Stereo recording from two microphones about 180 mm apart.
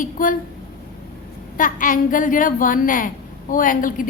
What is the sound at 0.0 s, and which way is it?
Speech, 50° left (ahead or behind).